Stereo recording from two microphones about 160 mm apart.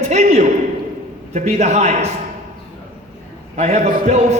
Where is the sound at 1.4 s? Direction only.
45° right (ahead or behind).